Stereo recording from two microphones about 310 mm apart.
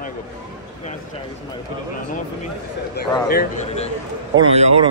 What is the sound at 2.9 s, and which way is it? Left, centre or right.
Speech, left.